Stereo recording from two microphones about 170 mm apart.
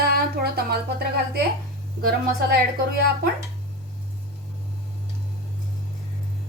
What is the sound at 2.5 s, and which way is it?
Speech, 70° right (ahead or behind).